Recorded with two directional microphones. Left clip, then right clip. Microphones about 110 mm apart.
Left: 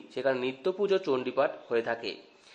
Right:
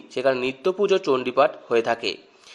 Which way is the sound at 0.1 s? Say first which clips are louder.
Right 7 dB; 20° right (ahead or behind).